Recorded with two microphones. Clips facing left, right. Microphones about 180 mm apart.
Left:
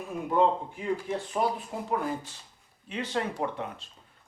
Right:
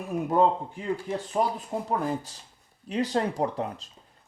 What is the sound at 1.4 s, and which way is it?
Speech, 30° right (ahead or behind).